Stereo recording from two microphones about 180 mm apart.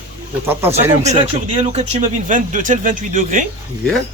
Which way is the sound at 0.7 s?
35° right (ahead or behind).